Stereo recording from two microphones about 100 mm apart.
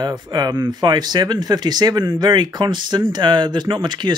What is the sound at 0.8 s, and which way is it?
Speech, 45° right (ahead or behind).